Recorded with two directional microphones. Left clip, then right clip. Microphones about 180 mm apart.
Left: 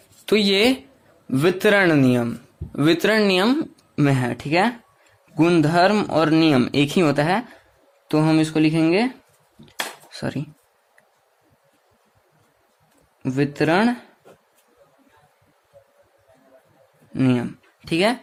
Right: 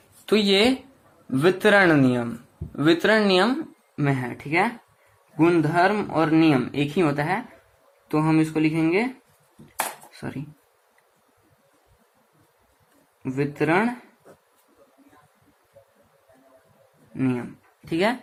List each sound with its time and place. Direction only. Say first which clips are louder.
0.3 s speech: left 2 dB; 30° left (ahead or behind)
3.9 s speech: left 5 dB; 70° left (ahead or behind)
10.1 s a sound: left 7 dB; 65° left (ahead or behind)
13.2 s speech: left 3 dB; 60° left (ahead or behind)
17.2 s speech: left 5 dB; 60° left (ahead or behind); by 18.2 s 45° left (ahead or behind)